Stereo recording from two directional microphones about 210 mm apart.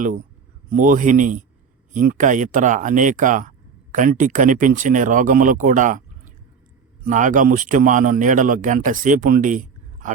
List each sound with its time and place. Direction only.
0.7 s speech: 40° right (ahead or behind)